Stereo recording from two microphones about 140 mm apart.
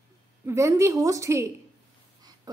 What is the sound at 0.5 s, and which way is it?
A woman's voice, 20° right (ahead or behind).